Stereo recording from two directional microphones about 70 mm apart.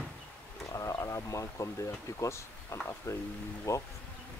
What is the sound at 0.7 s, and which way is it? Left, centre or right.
Speech, left.